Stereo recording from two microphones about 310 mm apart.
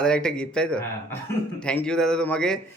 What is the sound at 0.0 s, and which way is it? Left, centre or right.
A man's voice, centre.